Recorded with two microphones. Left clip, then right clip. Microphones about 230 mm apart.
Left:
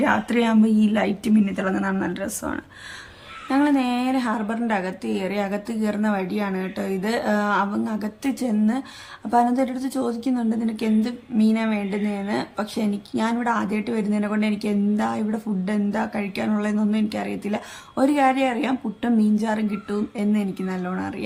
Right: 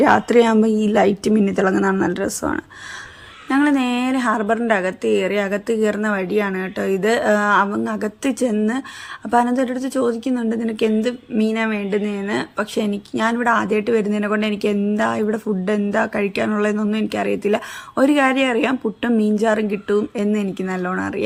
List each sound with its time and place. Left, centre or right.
0.0 s a woman's voice: right